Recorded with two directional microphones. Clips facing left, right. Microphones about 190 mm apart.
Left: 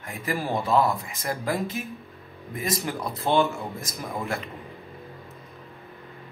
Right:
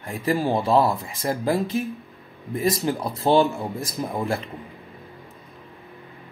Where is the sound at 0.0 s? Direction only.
30° right (ahead or behind).